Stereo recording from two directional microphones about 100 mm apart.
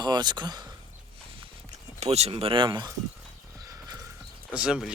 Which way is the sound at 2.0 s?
90° right.